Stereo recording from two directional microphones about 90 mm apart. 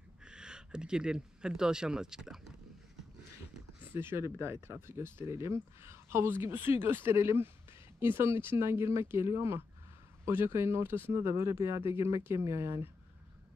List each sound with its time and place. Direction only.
0.2 s speech: 10° right (ahead or behind)
3.9 s speech: 25° right (ahead or behind)